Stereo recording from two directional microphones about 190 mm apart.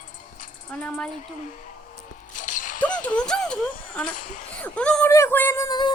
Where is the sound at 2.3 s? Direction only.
40° left (ahead or behind).